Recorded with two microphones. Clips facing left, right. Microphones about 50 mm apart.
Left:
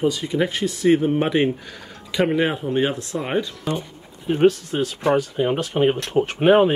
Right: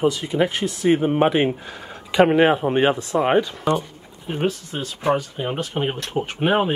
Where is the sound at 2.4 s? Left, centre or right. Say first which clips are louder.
Right 4 dB; right.